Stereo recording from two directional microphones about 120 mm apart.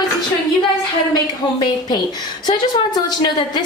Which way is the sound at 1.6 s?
35° left (ahead or behind).